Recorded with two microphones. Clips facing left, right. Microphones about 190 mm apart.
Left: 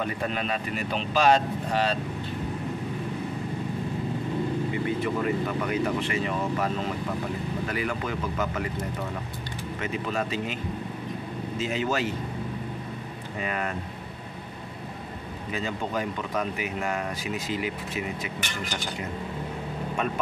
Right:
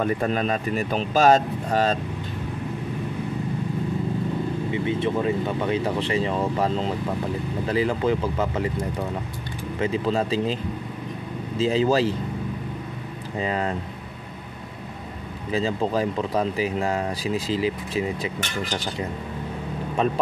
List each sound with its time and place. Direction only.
0.0 s speech: 40° right (ahead or behind)
4.7 s speech: 25° right (ahead or behind)
9.8 s speech: 30° right (ahead or behind)
13.4 s speech: 25° right (ahead or behind)
15.5 s speech: 30° right (ahead or behind)